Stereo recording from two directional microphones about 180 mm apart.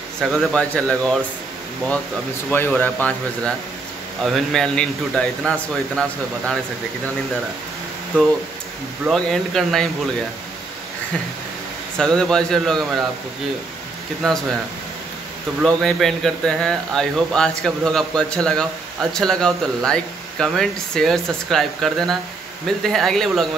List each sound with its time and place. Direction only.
0.2 s speech: centre (ahead or behind)
2.5 s speech: 10° left (ahead or behind)
9.0 s speech: centre (ahead or behind)
12.0 s speech: 5° left (ahead or behind)
14.2 s speech: centre (ahead or behind)
15.6 s speech: centre (ahead or behind)